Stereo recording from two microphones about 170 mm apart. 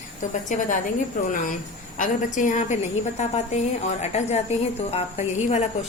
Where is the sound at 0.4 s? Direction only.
50° left (ahead or behind).